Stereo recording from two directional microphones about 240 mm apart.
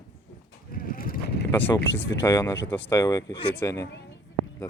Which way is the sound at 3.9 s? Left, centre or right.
Left.